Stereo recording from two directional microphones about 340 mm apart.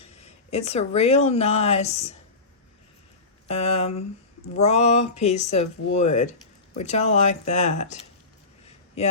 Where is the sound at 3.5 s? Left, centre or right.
Centre.